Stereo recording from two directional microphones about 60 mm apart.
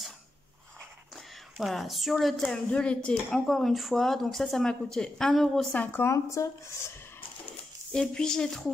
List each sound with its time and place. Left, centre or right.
1.1 s speech: centre
2.4 s speech: centre
5.7 s speech: left
6.0 s speech: left
7.9 s speech: centre